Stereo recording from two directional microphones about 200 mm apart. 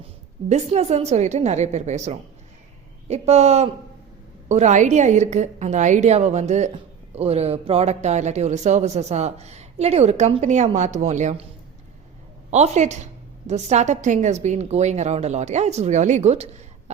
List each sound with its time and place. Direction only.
0.4 s speech: 35° right (ahead or behind)
12.5 s speech: 35° right (ahead or behind)